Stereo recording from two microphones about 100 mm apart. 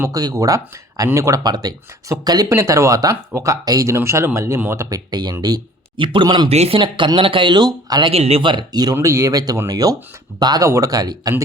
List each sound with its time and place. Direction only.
0.1 s speech: 40° right (ahead or behind)
2.5 s speech: 30° right (ahead or behind)
4.9 s speech: 40° right (ahead or behind)
6.5 s speech: 90° right
6.7 s speech: 55° right (ahead or behind)
8.0 s speech: 85° right
8.4 s speech: 45° right (ahead or behind)